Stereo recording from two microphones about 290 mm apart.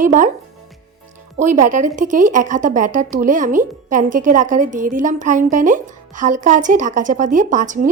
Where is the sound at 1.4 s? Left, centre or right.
Right.